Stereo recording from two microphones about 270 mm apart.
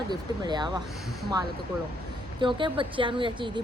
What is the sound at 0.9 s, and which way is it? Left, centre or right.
Speech, centre.